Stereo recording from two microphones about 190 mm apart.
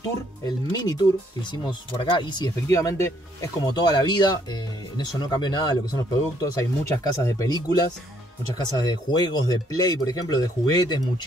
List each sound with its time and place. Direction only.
0.0 s speech: 20° left (ahead or behind)
8.5 s speech: 20° left (ahead or behind)